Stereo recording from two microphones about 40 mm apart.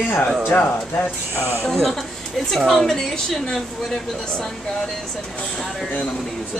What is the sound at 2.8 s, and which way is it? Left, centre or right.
Speech, centre.